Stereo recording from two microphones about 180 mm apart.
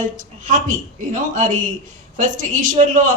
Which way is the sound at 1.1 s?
45° right (ahead or behind).